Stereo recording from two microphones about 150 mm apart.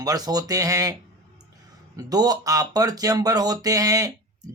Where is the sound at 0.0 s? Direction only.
25° right (ahead or behind).